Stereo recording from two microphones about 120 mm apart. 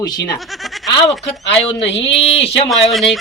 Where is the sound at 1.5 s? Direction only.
55° left (ahead or behind).